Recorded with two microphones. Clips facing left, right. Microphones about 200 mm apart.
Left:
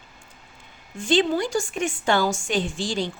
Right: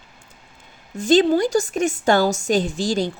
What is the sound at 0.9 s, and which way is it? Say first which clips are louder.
A woman's voice: right 6 dB; 40° right (ahead or behind).